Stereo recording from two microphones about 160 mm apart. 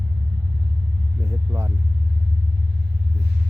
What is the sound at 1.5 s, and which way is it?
Speech, 20° right (ahead or behind).